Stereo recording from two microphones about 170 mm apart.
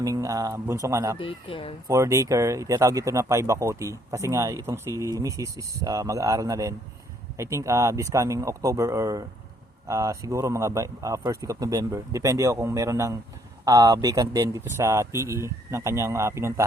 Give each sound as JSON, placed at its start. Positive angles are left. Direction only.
{"t": 0.0, "sound": "speech", "side_deg": -20}
{"t": 1.2, "sound": "speech", "side_deg": 30}
{"t": 1.9, "sound": "speech", "side_deg": -20}